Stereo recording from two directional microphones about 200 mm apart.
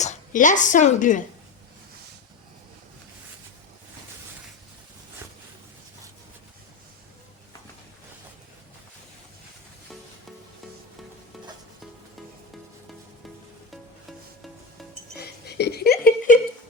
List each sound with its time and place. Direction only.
0.0 s a woman's voice: 35° left (ahead or behind)
13.7 s music: centre (ahead or behind)
15.2 s a sound: 55° left (ahead or behind)